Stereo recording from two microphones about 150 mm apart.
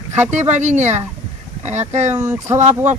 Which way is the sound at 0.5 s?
50° right (ahead or behind).